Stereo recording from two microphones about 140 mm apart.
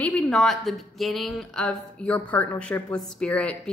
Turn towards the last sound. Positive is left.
turn(degrees=5)  # may be behind; listen again after turning